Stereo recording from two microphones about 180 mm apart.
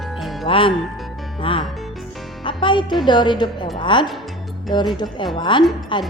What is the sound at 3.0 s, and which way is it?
A woman's voice, 25° left (ahead or behind).